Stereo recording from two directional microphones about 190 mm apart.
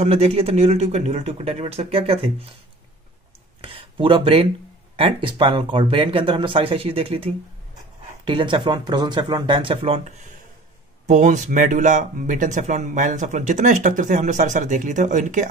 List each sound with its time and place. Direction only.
0.0 s speech: 35° right (ahead or behind)
3.6 s speech: 30° right (ahead or behind)